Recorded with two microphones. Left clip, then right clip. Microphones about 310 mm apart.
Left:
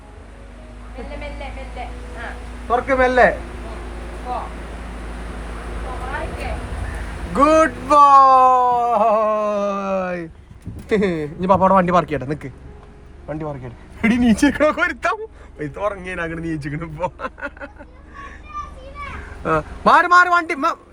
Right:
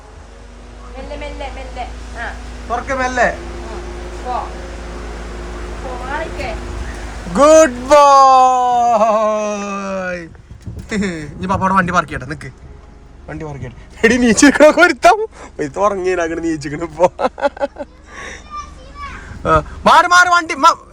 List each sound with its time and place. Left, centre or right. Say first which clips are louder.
2.6 s speech: left 2 dB; centre
7.3 s speech: right 6 dB; centre
14.0 s a man's voice: right 7 dB; centre
19.5 s a man's voice: right 4 dB; centre